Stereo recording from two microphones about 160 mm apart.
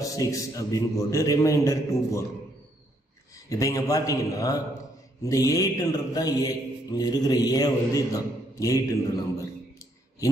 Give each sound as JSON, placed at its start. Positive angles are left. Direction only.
{"t": 0.0, "sound": "mantra", "side_deg": 20}
{"t": 3.4, "sound": "mantra", "side_deg": 20}